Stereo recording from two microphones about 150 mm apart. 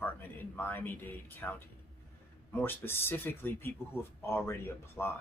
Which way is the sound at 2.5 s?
15° left (ahead or behind).